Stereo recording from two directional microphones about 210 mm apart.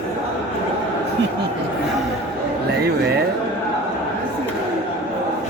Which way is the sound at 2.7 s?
50° right (ahead or behind).